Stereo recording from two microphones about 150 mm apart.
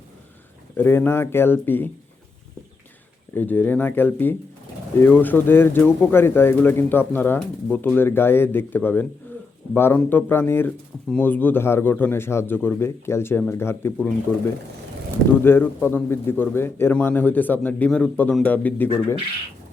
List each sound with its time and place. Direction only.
0.8 s speech: 15° left (ahead or behind)
3.3 s speech: 10° left (ahead or behind)
15.4 s speech: 15° left (ahead or behind)